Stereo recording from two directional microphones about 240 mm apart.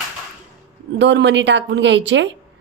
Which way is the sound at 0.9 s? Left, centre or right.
Right.